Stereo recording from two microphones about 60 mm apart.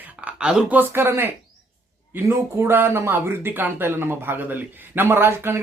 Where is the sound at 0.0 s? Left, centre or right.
Right.